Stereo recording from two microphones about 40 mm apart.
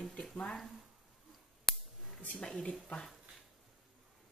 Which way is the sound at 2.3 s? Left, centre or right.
Centre.